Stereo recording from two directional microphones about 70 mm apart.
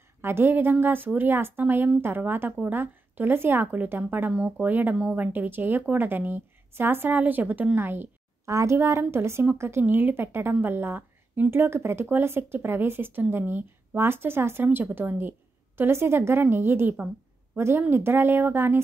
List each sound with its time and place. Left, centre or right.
0.2 s a woman's voice: right
8.5 s a woman's voice: right